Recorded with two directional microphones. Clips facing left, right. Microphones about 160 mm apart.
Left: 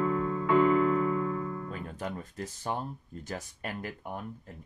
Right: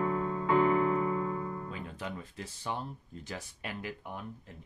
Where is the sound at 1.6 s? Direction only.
45° left (ahead or behind).